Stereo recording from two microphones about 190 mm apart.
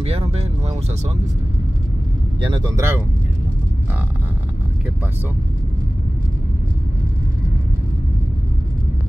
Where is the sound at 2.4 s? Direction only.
20° right (ahead or behind).